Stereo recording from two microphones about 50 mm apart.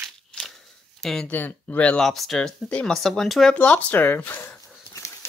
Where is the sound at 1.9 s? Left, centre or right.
Centre.